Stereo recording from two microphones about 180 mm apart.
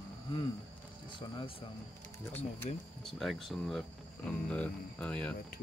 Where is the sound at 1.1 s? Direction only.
25° left (ahead or behind).